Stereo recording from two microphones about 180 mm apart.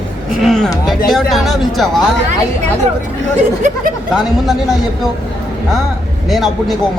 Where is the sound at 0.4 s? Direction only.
5° left (ahead or behind).